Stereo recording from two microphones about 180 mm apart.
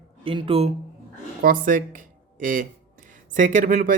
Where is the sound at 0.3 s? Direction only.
30° right (ahead or behind).